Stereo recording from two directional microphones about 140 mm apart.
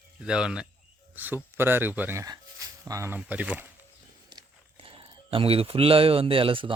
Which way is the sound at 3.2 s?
10° right (ahead or behind).